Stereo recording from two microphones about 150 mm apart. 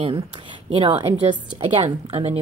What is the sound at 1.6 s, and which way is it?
Speech, 40° right (ahead or behind).